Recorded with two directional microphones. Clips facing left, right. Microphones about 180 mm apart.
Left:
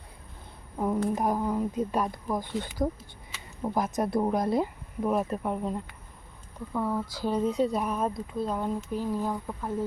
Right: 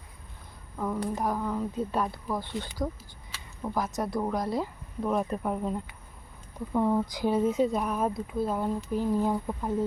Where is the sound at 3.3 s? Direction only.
20° left (ahead or behind).